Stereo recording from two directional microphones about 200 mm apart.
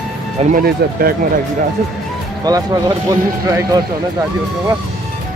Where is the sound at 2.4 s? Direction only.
20° right (ahead or behind).